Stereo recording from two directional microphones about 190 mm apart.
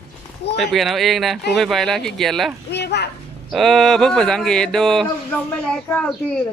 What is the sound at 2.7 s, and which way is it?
Speech, 60° left (ahead or behind).